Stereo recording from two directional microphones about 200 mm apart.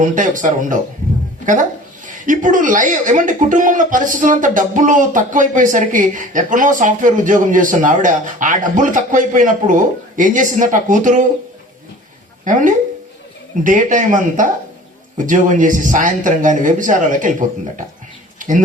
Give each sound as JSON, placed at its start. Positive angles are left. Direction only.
{"t": 0.0, "sound": "speech", "side_deg": -40}
{"t": 2.0, "sound": "speech", "side_deg": -40}
{"t": 12.5, "sound": "speech", "side_deg": -40}
{"t": 18.3, "sound": "a sound", "side_deg": -40}